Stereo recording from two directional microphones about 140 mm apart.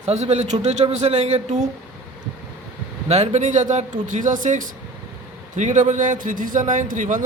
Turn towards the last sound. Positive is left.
turn(degrees=-65)  # may be behind; listen again after turning